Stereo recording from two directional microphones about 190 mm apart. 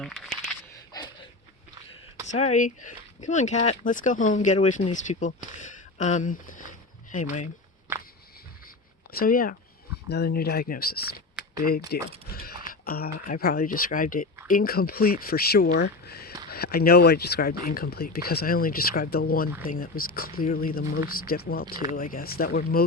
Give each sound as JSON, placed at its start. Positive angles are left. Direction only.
{"t": 0.0, "sound": "speech", "side_deg": 0}
{"t": 0.7, "sound": "a sound", "side_deg": 20}
{"t": 2.2, "sound": "speech", "side_deg": 35}
{"t": 9.1, "sound": "speech", "side_deg": 50}